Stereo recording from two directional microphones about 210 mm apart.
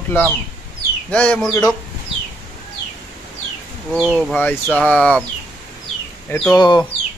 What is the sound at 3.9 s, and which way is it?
Speech, 5° right (ahead or behind).